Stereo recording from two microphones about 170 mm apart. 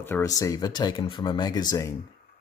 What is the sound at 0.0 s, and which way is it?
Speech, 15° left (ahead or behind).